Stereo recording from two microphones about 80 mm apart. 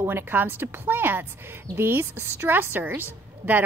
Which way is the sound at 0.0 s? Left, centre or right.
Right.